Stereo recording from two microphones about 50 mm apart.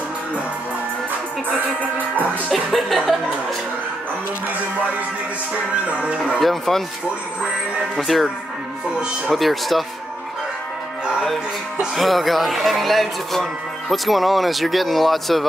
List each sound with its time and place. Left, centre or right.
2.5 s speech: centre
5.9 s speech: right
6.4 s speech: centre
8.1 s speech: centre
9.3 s speech: centre
11.9 s speech: centre